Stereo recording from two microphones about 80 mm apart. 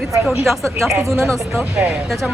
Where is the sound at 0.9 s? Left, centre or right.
Right.